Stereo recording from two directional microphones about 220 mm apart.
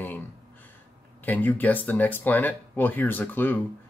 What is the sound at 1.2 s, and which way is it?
Speech, 10° left (ahead or behind).